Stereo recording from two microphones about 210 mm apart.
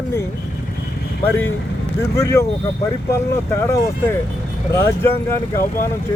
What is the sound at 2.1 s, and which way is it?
Speech, 15° left (ahead or behind).